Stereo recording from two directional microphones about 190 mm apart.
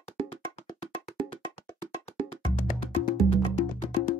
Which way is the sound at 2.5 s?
30° left (ahead or behind).